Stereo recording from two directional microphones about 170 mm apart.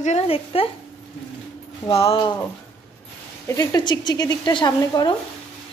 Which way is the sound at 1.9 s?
35° left (ahead or behind).